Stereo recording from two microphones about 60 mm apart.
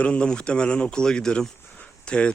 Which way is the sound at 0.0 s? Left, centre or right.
Centre.